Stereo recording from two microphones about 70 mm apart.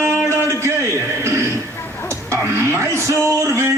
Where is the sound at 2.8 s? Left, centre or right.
Right.